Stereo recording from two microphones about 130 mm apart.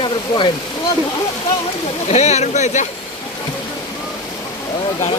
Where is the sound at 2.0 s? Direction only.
55° left (ahead or behind).